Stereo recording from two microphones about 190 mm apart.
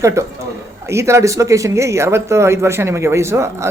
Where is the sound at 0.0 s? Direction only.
15° right (ahead or behind).